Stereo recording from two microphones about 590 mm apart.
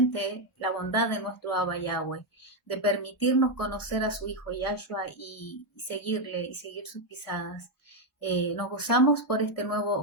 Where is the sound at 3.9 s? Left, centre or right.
Left.